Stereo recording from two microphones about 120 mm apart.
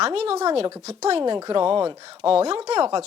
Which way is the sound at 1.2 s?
35° right (ahead or behind).